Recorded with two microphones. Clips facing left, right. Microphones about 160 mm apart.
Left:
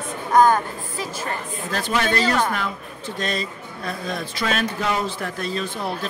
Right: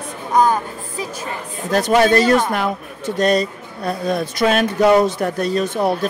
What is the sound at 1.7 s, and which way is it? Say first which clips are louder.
Speech: right 9 dB; 40° right (ahead or behind).